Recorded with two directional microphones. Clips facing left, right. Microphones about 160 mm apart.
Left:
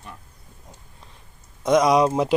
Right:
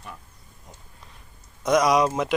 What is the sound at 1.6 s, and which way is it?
Speech, 25° left (ahead or behind).